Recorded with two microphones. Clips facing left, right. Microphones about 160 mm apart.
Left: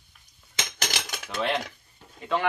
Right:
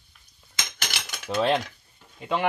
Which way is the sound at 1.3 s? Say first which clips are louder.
Right 6 dB; 30° right (ahead or behind).